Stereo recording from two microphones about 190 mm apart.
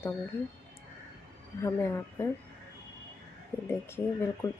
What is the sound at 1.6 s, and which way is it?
Speech, 15° left (ahead or behind).